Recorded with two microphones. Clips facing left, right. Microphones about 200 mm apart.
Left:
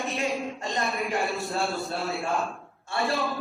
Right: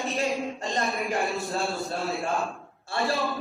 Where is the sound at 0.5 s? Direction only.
35° right (ahead or behind).